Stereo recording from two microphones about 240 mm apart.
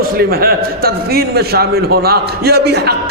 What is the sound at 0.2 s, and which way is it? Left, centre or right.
A man's voice, right.